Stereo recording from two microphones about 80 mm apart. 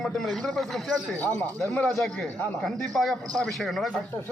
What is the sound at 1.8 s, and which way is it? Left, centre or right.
A man's voice, centre.